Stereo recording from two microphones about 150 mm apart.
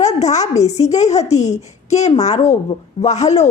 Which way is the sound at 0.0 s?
50° left (ahead or behind).